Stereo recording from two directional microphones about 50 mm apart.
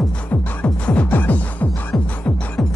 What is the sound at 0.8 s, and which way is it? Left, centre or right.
Music, left.